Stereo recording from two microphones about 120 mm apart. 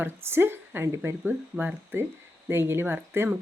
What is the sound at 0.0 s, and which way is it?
A woman's voice, 20° right (ahead or behind).